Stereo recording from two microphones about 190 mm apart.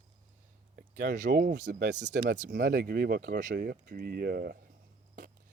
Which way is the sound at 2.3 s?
55° right (ahead or behind).